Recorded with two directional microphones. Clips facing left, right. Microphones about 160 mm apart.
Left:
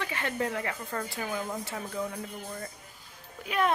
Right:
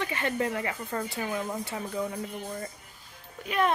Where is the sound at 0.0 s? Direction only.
5° right (ahead or behind).